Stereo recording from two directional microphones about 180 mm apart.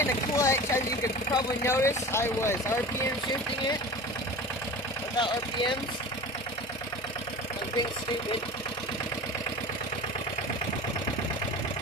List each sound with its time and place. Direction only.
0.0 s speech: 15° left (ahead or behind)
5.2 s speech: 25° left (ahead or behind)